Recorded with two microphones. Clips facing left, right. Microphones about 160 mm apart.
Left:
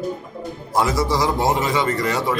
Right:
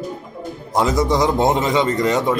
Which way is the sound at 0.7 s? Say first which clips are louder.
Right 2 dB; 20° right (ahead or behind).